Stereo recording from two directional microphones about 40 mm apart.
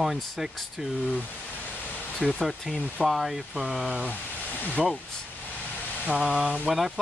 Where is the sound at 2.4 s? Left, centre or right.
Centre.